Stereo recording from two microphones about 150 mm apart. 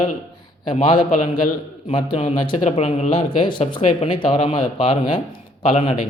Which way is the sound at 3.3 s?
35° left (ahead or behind).